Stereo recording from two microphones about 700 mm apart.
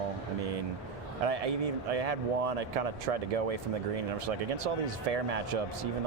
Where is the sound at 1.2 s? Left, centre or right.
Right.